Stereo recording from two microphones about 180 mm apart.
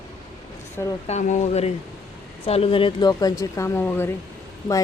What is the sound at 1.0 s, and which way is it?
Speech, 40° left (ahead or behind).